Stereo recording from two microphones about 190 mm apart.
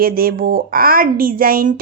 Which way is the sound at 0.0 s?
50° right (ahead or behind).